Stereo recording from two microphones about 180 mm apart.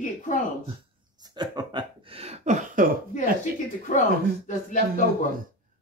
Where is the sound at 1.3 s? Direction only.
25° right (ahead or behind); by 2.9 s 45° right (ahead or behind).